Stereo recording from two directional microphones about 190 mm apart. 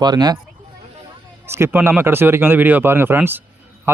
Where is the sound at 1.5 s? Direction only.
10° right (ahead or behind).